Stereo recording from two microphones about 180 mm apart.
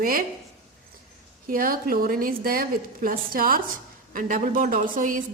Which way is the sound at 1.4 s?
50° right (ahead or behind).